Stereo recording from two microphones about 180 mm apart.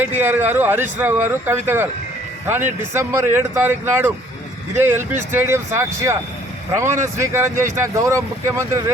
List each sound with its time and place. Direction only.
0.0 s a man's voice: 10° right (ahead or behind)